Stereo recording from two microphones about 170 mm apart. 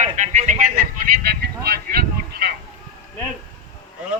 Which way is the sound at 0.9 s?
70° right (ahead or behind).